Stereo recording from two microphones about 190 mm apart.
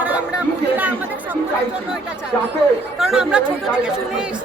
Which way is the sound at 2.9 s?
Centre (ahead or behind).